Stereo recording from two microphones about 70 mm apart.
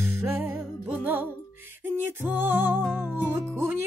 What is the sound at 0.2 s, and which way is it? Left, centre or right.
Music, right.